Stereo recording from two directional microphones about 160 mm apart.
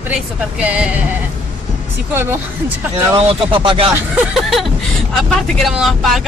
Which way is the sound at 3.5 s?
35° right (ahead or behind).